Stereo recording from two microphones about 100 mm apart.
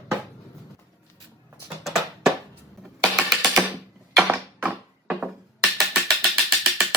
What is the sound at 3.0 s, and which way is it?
Typing, 5° left (ahead or behind).